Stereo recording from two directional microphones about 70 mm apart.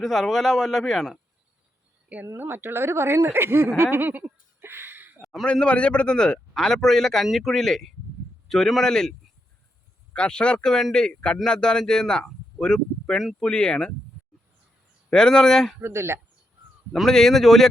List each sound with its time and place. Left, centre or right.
0.0 s speech: centre
2.2 s speech: right
4.6 s a sound: right
5.2 s a sound: centre
5.5 s speech: centre
15.1 s speech: centre
15.8 s speech: right
16.9 s speech: centre